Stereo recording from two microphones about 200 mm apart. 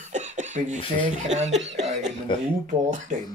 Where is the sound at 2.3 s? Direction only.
25° left (ahead or behind).